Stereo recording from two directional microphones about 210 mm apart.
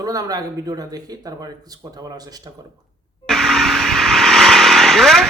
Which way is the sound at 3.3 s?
Centre (ahead or behind).